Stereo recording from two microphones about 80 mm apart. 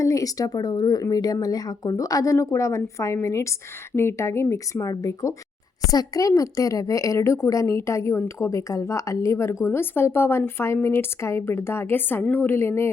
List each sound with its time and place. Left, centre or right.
0.0 s speech: left